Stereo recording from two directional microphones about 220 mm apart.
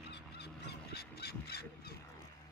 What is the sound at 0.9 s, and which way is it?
Crow, 45° left (ahead or behind).